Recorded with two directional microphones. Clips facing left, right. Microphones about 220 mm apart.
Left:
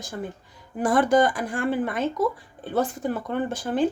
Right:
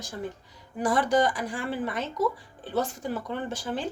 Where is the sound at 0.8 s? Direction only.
50° left (ahead or behind).